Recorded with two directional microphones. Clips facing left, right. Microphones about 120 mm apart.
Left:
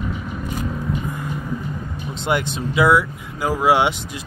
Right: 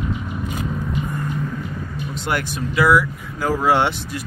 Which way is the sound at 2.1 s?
20° left (ahead or behind).